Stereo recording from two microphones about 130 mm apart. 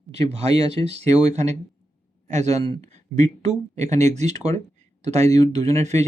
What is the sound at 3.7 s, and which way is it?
Speech, 60° right (ahead or behind).